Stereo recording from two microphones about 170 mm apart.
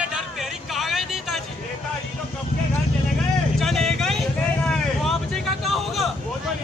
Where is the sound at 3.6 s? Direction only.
Centre (ahead or behind).